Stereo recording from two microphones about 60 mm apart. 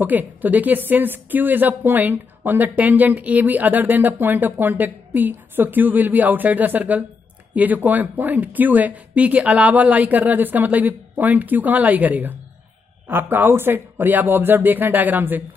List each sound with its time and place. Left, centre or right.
0.0 s a woman's voice: right